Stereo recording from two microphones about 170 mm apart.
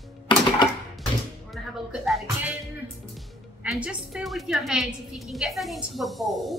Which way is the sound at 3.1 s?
5° right (ahead or behind).